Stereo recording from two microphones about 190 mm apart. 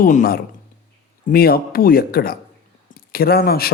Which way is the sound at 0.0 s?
45° left (ahead or behind).